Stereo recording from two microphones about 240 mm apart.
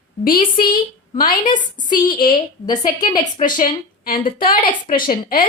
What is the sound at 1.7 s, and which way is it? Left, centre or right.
A woman's voice, centre.